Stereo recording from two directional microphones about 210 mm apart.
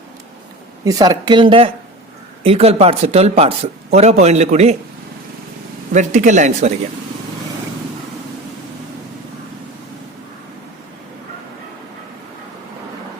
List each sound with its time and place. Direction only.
0.9 s speech: 15° right (ahead or behind); by 4.8 s 30° right (ahead or behind)
5.9 s speech: 35° right (ahead or behind)